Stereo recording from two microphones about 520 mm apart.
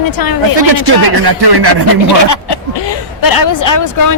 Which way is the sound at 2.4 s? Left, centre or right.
Left.